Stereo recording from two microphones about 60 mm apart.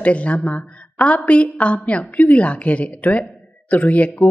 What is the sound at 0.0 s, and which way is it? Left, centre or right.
A woman's voice, left.